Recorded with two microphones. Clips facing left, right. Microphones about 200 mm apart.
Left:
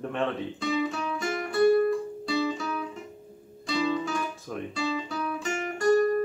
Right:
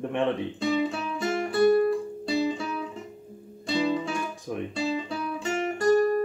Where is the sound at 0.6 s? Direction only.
30° right (ahead or behind).